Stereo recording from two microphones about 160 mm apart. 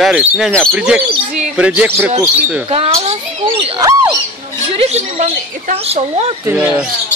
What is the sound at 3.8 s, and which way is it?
Rodents, 20° right (ahead or behind).